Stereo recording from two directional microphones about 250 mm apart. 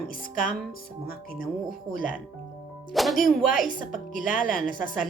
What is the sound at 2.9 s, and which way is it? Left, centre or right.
Speech, centre.